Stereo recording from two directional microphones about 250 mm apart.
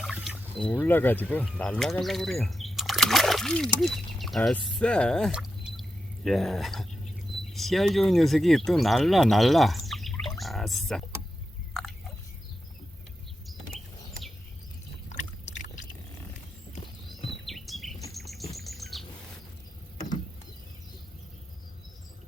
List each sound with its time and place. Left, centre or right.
0.0 s a sound: centre
0.6 s speech: centre
11.7 s biting: centre
13.5 s chirp: centre
15.1 s a sound: left
17.4 s insect: centre
18.1 s chirp: centre